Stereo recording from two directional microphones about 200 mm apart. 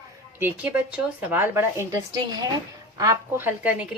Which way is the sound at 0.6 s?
10° right (ahead or behind).